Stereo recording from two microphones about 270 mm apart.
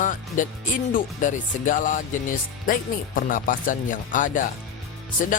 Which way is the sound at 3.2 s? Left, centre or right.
Left.